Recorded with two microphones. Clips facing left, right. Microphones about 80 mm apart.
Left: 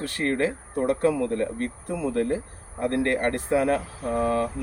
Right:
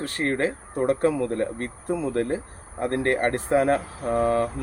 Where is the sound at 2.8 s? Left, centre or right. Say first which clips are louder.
Right 1 dB; right.